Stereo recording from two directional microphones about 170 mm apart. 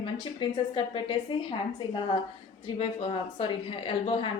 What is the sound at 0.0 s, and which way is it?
A woman's voice, 30° left (ahead or behind).